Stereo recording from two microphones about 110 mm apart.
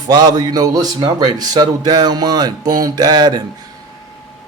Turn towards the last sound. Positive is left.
turn(degrees=-40)  # may be behind; listen again after turning